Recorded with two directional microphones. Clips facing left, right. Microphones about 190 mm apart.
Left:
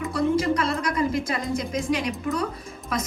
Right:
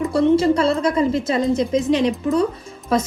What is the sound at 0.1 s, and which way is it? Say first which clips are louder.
A woman's voice: right 6 dB; 30° right (ahead or behind).